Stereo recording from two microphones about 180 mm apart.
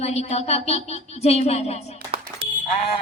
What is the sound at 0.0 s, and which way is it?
Speech, 35° left (ahead or behind).